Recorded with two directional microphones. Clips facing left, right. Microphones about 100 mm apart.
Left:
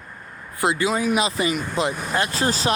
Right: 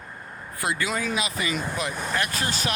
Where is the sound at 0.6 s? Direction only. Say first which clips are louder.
Left 6 dB; 20° left (ahead or behind).